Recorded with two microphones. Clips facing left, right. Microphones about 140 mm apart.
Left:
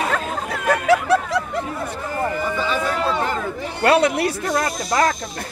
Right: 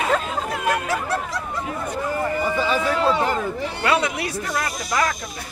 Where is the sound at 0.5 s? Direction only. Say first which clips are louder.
Left 7 dB; 70° left (ahead or behind).